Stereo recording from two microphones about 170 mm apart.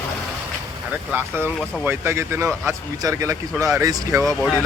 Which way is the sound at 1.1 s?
15° right (ahead or behind).